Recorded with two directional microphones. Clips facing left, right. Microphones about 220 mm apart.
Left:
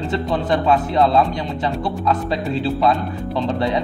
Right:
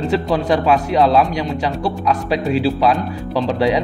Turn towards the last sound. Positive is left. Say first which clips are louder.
# right 4 dB
turn(degrees=-90)